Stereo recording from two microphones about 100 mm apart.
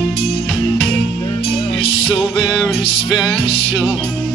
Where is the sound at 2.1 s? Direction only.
5° right (ahead or behind).